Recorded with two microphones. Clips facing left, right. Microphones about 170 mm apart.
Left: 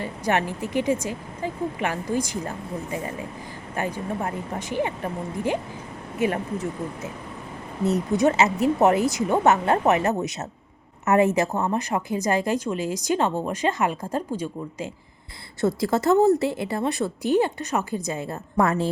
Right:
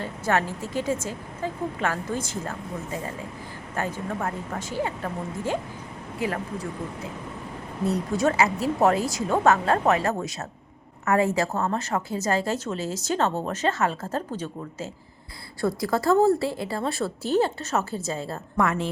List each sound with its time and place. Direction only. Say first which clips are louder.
0.0 s a woman's voice: left 1 dB; 15° left (ahead or behind)
15.6 s a woman's voice: left 2 dB; 25° left (ahead or behind)
18.5 s a woman's voice: left 3 dB; 35° left (ahead or behind)